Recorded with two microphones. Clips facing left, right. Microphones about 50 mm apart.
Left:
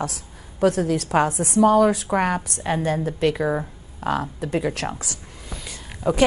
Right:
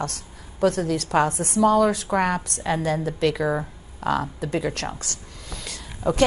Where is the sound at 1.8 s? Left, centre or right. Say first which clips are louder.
Left 1 dB; centre.